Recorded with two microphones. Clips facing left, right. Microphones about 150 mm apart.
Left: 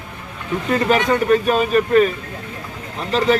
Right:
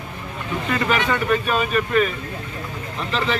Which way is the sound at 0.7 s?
40° left (ahead or behind).